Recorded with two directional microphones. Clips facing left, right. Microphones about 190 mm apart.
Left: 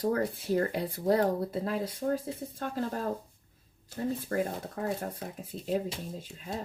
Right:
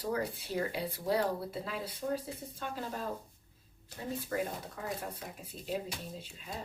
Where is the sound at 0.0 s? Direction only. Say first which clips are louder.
Left 6 dB; 50° left (ahead or behind).